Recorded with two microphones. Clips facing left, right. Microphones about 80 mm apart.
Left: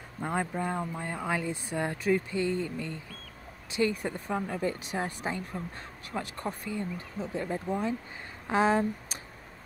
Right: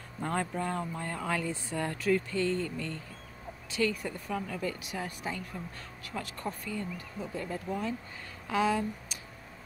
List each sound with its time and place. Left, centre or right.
0.2 s a woman's voice: centre
8.5 s speech: left